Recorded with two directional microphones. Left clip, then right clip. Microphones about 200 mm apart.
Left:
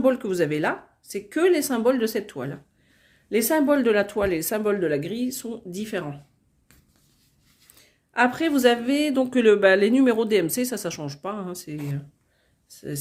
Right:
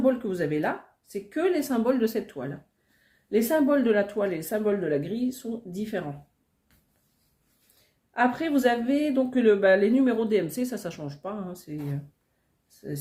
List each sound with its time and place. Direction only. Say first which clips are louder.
0.0 s speech: left 4 dB; 50° left (ahead or behind)
8.1 s speech: left 3 dB; 40° left (ahead or behind)